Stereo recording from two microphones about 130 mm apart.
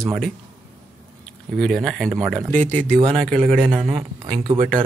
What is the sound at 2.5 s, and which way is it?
Speech, 15° left (ahead or behind).